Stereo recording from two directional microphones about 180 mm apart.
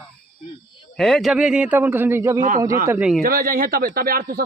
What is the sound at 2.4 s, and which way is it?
Speech, 45° right (ahead or behind).